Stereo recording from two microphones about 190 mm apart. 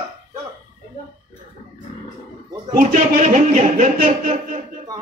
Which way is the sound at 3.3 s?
40° right (ahead or behind).